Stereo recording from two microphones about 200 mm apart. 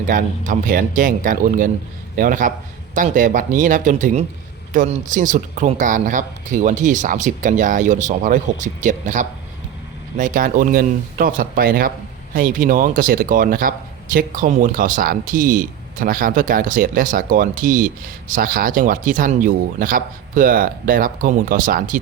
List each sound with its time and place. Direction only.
0.1 s speech: 40° right (ahead or behind)